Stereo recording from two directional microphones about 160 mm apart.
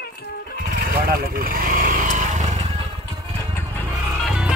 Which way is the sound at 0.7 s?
65° right (ahead or behind).